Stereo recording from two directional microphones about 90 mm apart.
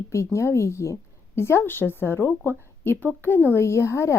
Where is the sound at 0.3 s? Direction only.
30° left (ahead or behind).